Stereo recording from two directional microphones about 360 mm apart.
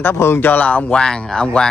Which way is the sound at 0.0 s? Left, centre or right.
Centre.